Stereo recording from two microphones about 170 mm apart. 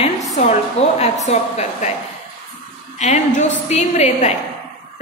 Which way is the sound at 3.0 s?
45° left (ahead or behind).